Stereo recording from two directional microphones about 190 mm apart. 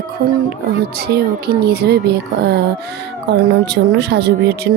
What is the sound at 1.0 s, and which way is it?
Speech, 55° right (ahead or behind).